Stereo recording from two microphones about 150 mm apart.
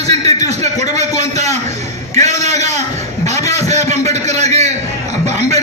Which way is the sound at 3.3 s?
20° left (ahead or behind).